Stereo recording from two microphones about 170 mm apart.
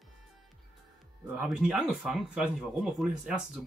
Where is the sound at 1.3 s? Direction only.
5° right (ahead or behind).